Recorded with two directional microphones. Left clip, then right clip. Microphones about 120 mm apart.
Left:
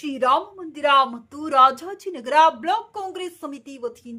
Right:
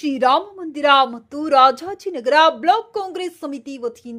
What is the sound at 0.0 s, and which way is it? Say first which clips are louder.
A woman's voice: right 4 dB; 40° right (ahead or behind).